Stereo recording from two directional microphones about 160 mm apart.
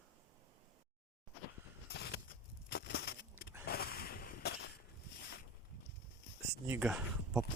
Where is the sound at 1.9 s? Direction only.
85° left.